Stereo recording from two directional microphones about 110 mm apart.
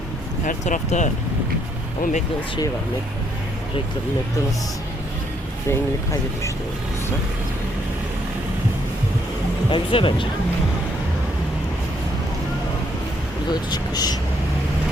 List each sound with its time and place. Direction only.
0.6 s speech: 90° left
5.7 s speech: 30° left (ahead or behind)
9.6 s speech: 50° left (ahead or behind)
13.5 s speech: 40° left (ahead or behind)